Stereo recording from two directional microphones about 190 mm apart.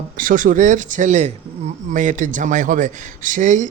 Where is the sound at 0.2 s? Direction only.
45° right (ahead or behind).